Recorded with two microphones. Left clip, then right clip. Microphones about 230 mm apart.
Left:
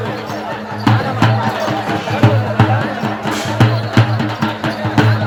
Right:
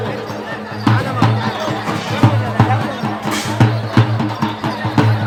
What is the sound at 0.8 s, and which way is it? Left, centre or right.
Music, centre.